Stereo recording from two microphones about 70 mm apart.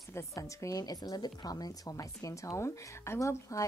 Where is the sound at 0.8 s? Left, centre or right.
Left.